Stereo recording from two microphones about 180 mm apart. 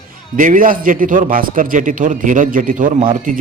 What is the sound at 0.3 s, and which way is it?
A man's voice, 50° right (ahead or behind).